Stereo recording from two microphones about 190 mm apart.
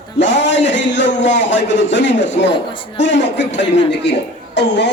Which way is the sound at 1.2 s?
70° left (ahead or behind).